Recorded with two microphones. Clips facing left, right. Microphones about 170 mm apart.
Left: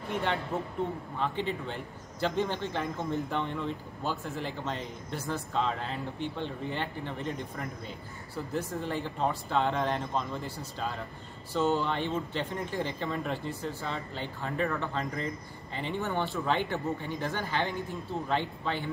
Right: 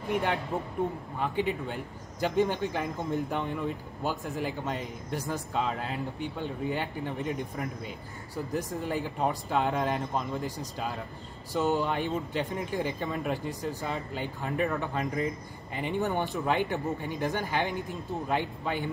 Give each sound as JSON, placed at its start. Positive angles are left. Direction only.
{"t": 0.1, "sound": "a man's voice", "side_deg": -10}
{"t": 11.5, "sound": "a man's voice", "side_deg": -15}